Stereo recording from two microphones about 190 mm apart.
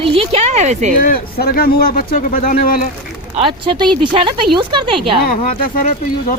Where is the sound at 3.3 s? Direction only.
30° right (ahead or behind).